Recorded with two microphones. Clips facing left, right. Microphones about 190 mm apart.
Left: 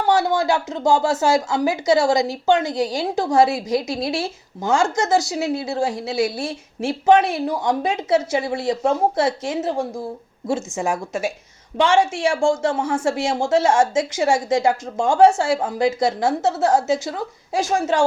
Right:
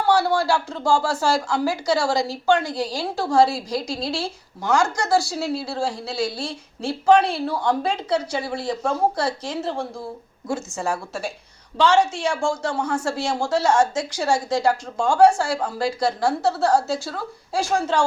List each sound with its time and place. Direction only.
0.0 s speech: 20° left (ahead or behind)